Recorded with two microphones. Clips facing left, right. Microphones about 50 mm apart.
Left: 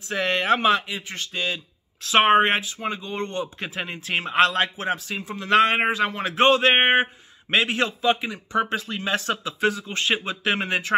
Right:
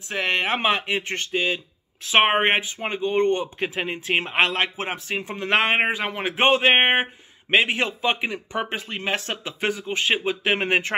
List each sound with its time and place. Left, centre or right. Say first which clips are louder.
0.3 s a man's voice: left 2 dB; right
0.8 s speech: right 6 dB; right
1.3 s a man's voice: right 3 dB; centre
3.6 s a man's voice: right 4 dB; centre
10.7 s speech: even; right